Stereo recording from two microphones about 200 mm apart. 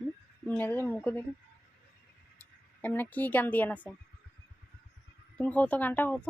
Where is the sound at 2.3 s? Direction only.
10° left (ahead or behind).